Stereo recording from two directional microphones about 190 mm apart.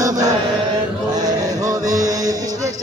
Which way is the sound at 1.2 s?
20° right (ahead or behind).